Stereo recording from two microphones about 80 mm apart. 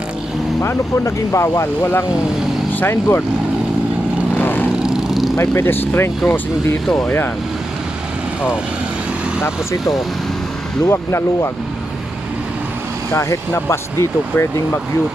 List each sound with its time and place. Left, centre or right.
0.6 s speech: left
4.4 s vehicle: left
4.8 s vehicle: centre
5.4 s speech: left
10.8 s speech: left
13.1 s speech: left